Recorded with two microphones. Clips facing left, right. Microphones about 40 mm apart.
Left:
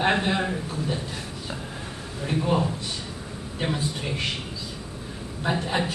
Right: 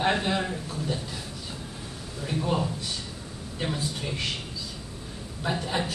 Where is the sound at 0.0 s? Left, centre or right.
Centre.